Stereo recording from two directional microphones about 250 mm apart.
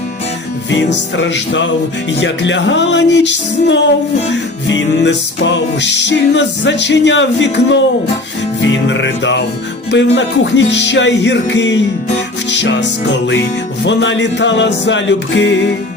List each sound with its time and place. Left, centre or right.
0.7 s music: left
8.9 s music: left